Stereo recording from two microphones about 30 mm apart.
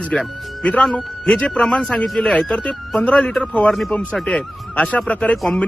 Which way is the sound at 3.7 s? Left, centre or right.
Centre.